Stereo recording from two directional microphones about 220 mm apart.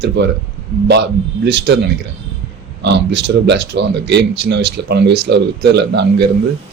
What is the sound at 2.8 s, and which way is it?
Speech, 50° right (ahead or behind).